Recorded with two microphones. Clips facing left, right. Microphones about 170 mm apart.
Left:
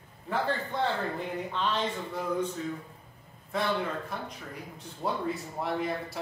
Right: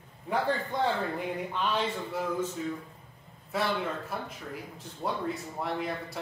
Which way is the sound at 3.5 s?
5° right (ahead or behind).